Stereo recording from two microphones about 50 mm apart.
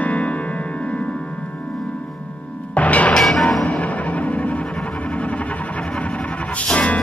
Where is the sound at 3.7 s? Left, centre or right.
Left.